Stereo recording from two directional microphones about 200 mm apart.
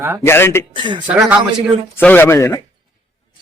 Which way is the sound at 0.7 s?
25° right (ahead or behind).